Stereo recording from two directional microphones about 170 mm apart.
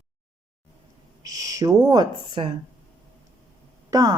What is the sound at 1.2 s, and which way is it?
Speech, 20° right (ahead or behind).